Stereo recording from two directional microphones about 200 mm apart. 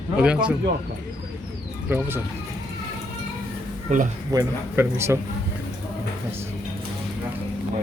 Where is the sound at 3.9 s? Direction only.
35° right (ahead or behind).